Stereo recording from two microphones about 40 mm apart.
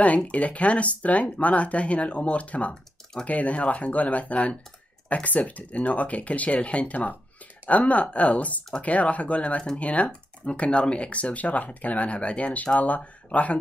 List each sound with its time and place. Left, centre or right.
0.0 s speech: left